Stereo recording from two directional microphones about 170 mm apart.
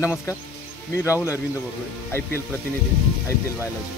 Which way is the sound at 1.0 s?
15° left (ahead or behind).